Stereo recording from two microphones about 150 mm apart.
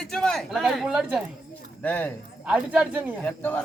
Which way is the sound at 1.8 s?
10° left (ahead or behind).